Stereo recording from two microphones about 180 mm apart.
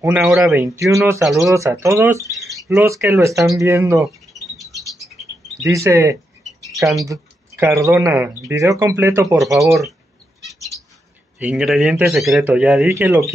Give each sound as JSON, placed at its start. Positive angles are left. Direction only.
{"t": 0.0, "sound": "speech", "side_deg": -5}
{"t": 1.2, "sound": "a man's voice", "side_deg": 0}
{"t": 1.5, "sound": "speech", "side_deg": -15}
{"t": 4.8, "sound": "rodents", "side_deg": 0}
{"t": 5.7, "sound": "speech", "side_deg": -15}
{"t": 10.5, "sound": "bird", "side_deg": 0}
{"t": 11.3, "sound": "a man's voice", "side_deg": -5}